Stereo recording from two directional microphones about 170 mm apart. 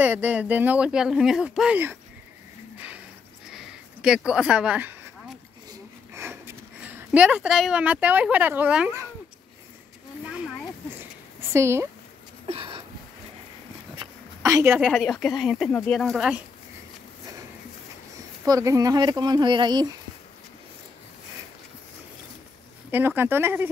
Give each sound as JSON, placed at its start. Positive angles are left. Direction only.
{"t": 0.0, "sound": "speech", "side_deg": -10}
{"t": 3.4, "sound": "a sound", "side_deg": -5}
{"t": 6.1, "sound": "speech", "side_deg": -15}
{"t": 10.2, "sound": "a sound", "side_deg": -5}
{"t": 11.5, "sound": "speech", "side_deg": -15}
{"t": 12.4, "sound": "a sound", "side_deg": -30}
{"t": 14.4, "sound": "a woman's voice", "side_deg": -15}
{"t": 14.9, "sound": "speech", "side_deg": 5}
{"t": 18.4, "sound": "speech", "side_deg": -20}
{"t": 22.8, "sound": "speech", "side_deg": -10}